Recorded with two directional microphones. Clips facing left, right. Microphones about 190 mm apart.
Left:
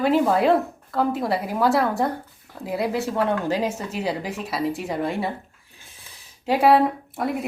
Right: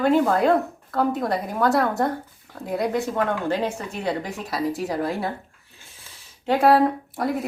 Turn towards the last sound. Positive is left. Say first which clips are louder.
# right 1 dB
turn(degrees=0)  # may be behind; listen again after turning